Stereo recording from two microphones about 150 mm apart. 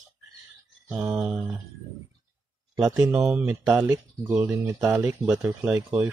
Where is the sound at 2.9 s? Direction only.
15° right (ahead or behind).